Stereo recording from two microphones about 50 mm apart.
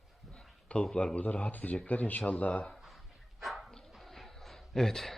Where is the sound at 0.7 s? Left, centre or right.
Left.